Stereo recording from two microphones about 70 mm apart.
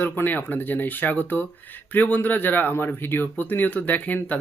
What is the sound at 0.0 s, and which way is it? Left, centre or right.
Speech, left.